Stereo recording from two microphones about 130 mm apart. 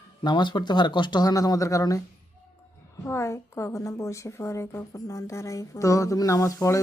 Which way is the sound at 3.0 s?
20° left (ahead or behind).